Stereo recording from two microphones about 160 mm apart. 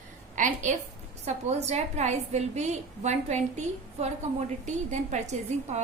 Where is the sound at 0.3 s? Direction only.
50° right (ahead or behind).